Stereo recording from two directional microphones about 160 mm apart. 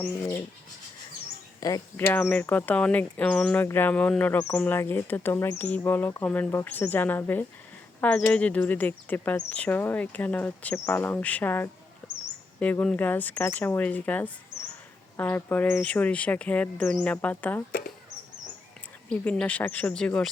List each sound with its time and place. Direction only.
0.0 s speech: 15° left (ahead or behind)
1.6 s speech: 20° left (ahead or behind)
19.0 s speech: 10° left (ahead or behind)